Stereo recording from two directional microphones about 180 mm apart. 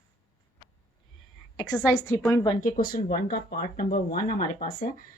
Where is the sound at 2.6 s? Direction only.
50° left (ahead or behind).